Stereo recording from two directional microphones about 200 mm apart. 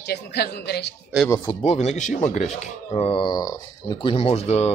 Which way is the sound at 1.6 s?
35° left (ahead or behind).